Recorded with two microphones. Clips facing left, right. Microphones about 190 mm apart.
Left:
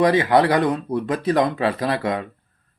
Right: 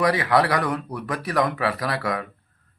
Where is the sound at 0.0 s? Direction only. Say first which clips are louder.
Left 4 dB; 25° left (ahead or behind).